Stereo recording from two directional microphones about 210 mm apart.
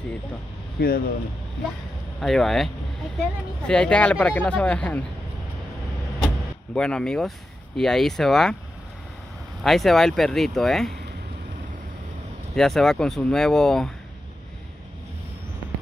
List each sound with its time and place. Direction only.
0.7 s speech: 45° left (ahead or behind)
2.1 s speech: centre (ahead or behind)
6.2 s speech: 5° left (ahead or behind)
9.6 s speech: centre (ahead or behind)
12.5 s speech: centre (ahead or behind)